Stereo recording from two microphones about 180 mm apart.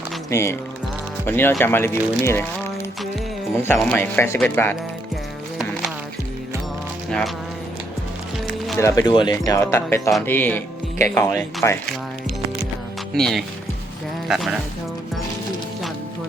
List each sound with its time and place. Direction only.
0.3 s speech: 15° left (ahead or behind)
3.5 s speech: 15° left (ahead or behind)
8.8 s speech: 20° left (ahead or behind)
13.1 s speech: 5° left (ahead or behind)